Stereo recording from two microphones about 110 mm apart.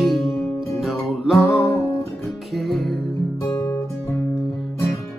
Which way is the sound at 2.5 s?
Centre (ahead or behind).